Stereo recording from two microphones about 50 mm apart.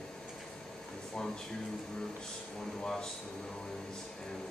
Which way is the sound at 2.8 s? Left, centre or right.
Centre.